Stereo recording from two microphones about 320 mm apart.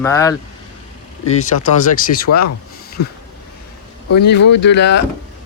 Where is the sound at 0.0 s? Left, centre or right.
Centre.